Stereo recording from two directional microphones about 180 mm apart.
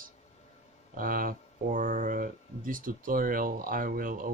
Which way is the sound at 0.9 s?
50° right (ahead or behind).